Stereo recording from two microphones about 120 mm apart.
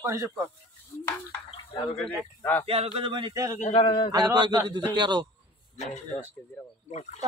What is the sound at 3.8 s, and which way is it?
Speech, 35° left (ahead or behind).